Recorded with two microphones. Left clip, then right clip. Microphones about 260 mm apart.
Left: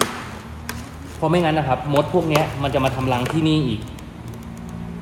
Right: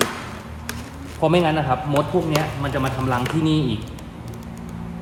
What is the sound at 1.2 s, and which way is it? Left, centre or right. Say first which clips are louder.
A man's voice: right 1 dB; centre.